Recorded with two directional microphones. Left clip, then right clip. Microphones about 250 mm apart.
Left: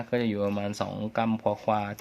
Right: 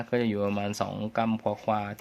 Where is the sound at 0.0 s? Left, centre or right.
Centre.